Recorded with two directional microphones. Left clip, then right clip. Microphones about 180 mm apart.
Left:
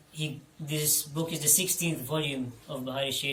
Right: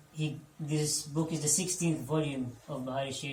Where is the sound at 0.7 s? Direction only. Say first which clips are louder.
Left 2 dB; centre (ahead or behind).